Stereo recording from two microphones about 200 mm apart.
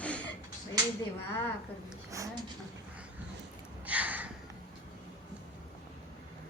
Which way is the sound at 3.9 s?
5° right (ahead or behind).